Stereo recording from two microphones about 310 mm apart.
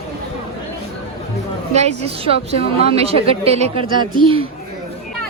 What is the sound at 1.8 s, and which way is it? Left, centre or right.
Speech, centre.